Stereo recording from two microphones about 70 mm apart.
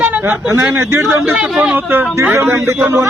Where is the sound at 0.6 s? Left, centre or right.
Right.